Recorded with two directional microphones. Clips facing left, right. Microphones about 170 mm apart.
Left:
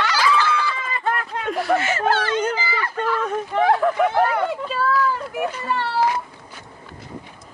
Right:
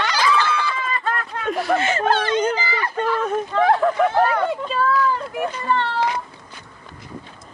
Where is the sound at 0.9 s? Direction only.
20° left (ahead or behind).